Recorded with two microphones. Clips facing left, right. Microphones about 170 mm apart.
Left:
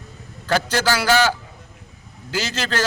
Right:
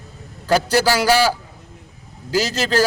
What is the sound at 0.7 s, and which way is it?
Speech, 10° right (ahead or behind).